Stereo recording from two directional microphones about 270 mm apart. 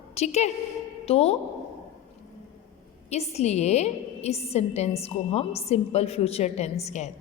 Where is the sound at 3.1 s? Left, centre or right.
Left.